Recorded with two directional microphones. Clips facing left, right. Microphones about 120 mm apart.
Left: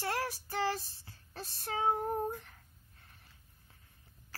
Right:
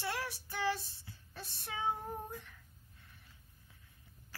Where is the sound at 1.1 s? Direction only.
40° left (ahead or behind).